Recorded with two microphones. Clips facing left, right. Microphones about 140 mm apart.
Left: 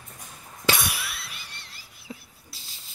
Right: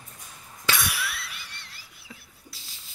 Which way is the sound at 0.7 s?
25° left (ahead or behind).